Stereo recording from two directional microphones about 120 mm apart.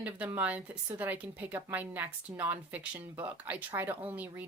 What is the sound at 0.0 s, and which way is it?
Speech, 15° right (ahead or behind).